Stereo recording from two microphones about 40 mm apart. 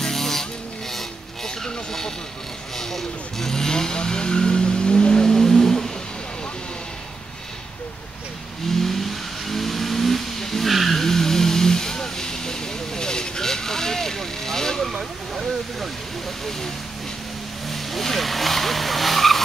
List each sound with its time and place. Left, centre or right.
0.0 s music: centre
0.9 s a sound: centre
2.8 s vehicle: centre
5.3 s a sound: centre
8.6 s vehicle: centre
17.6 s vehicle: centre